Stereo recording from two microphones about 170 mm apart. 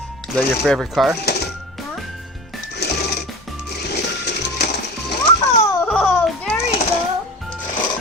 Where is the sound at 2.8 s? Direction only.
70° left (ahead or behind).